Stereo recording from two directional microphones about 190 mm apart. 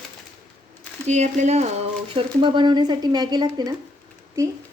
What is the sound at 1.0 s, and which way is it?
Speech, 40° right (ahead or behind).